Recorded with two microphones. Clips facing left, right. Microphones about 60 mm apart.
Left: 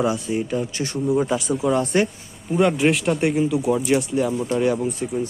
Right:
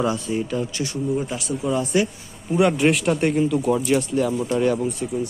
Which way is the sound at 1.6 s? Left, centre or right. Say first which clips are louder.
Left 1 dB; left.